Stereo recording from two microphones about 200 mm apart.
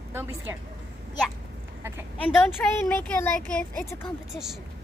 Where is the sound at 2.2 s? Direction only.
5° left (ahead or behind).